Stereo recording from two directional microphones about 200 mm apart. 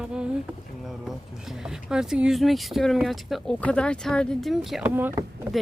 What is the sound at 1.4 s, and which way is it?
Speech, centre (ahead or behind).